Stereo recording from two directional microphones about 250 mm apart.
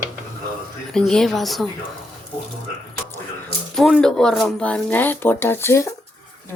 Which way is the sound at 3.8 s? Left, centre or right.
Centre.